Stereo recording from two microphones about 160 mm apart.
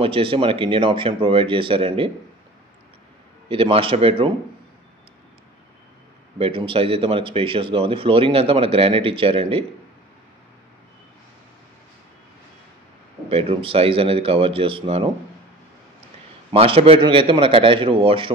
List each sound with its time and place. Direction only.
0.0 s speech: 35° right (ahead or behind)
3.4 s speech: 35° right (ahead or behind)
6.3 s speech: 35° right (ahead or behind)
13.3 s speech: 35° right (ahead or behind)
16.5 s speech: 35° right (ahead or behind)